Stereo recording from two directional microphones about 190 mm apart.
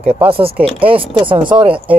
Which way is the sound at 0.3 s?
30° right (ahead or behind).